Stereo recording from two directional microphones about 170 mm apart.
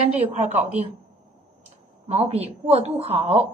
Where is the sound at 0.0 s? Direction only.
40° right (ahead or behind).